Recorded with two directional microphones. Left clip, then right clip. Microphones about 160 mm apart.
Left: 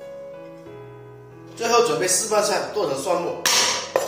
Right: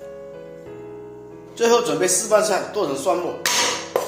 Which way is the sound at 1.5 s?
60° right (ahead or behind).